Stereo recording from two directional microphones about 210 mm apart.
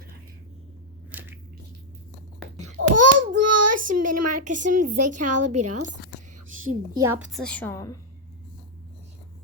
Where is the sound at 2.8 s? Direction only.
70° right (ahead or behind).